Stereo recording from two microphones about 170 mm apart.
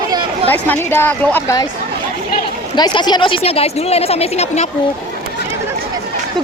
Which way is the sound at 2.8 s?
25° left (ahead or behind).